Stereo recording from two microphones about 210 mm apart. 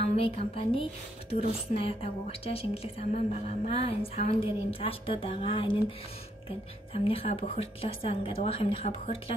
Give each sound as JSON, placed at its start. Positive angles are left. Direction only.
{"t": 0.0, "sound": "a woman's voice", "side_deg": 30}
{"t": 6.9, "sound": "a woman's voice", "side_deg": 25}